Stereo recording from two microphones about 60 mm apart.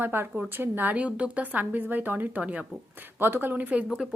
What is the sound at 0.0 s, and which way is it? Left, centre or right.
Speech, right.